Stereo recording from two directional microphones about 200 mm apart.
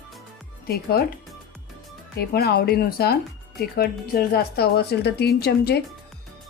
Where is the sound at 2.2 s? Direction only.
50° left (ahead or behind).